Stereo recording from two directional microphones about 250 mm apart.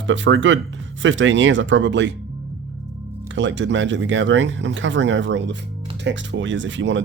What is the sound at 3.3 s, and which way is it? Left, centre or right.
Speech, right.